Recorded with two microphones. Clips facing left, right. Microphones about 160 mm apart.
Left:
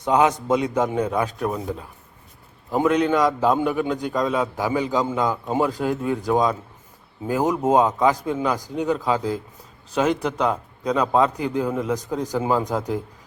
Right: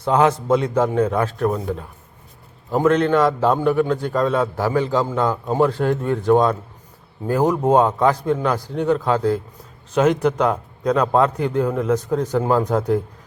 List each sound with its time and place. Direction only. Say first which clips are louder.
0.0 s a man's voice: right 2 dB; 15° left (ahead or behind)
1.5 s a man's voice: right 4 dB; centre (ahead or behind)
2.7 s a man's voice: right 3 dB; 10° left (ahead or behind)